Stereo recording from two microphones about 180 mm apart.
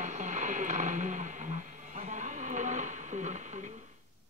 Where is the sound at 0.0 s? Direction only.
45° right (ahead or behind).